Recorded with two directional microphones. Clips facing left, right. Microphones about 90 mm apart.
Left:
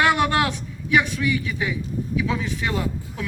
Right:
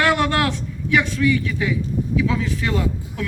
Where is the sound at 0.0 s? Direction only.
15° left (ahead or behind).